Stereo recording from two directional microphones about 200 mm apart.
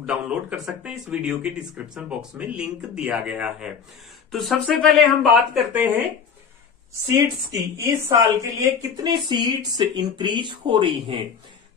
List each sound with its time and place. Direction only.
0.0 s speech: 5° right (ahead or behind)
7.5 s speech: 15° right (ahead or behind)